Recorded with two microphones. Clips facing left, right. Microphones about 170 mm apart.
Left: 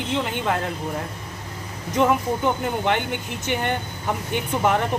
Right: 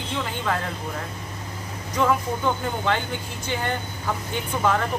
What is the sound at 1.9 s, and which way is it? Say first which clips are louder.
Speech: left 3 dB; 20° left (ahead or behind).